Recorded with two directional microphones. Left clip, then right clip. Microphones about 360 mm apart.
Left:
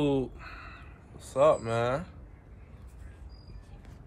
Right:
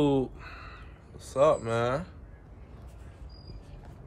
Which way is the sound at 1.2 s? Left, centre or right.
Centre.